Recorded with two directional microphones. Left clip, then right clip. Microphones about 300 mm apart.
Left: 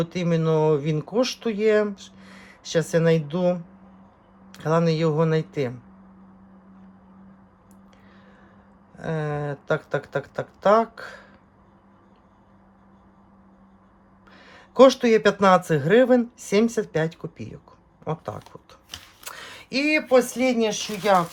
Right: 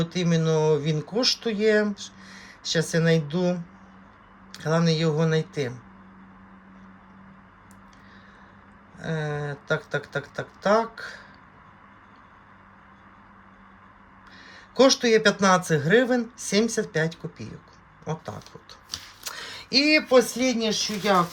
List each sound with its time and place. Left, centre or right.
0.0 s speech: centre
9.0 s speech: centre
14.3 s speech: centre